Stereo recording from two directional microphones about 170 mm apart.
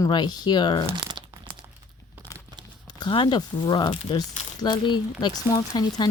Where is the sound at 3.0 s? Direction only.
25° left (ahead or behind).